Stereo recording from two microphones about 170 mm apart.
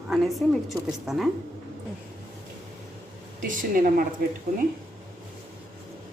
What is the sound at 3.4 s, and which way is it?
Speech, 55° right (ahead or behind).